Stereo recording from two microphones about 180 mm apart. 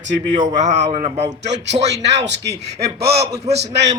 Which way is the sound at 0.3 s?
40° right (ahead or behind).